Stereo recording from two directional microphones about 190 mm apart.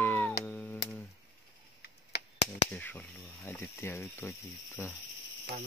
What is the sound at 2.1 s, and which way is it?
Chop, 60° left (ahead or behind).